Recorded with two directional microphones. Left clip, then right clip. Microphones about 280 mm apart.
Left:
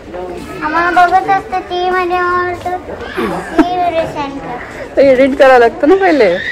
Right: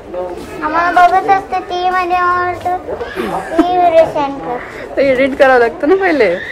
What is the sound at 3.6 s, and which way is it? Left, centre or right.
Speech, centre.